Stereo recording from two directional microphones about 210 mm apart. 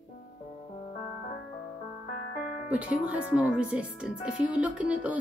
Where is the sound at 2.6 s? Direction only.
5° right (ahead or behind).